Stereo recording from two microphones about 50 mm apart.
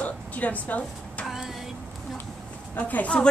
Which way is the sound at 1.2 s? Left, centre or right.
Centre.